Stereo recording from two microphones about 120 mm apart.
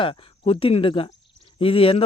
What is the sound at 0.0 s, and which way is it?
Speech, 45° left (ahead or behind).